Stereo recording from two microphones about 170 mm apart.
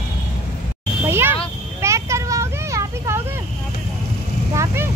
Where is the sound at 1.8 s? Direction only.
15° right (ahead or behind).